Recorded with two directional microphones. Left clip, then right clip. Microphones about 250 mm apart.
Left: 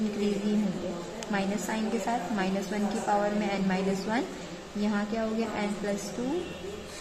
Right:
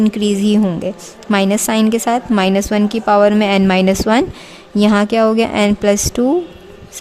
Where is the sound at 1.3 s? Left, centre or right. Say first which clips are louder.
Right 17 dB; right.